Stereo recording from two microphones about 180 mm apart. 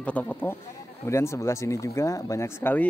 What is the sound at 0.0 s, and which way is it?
Speech, 10° left (ahead or behind).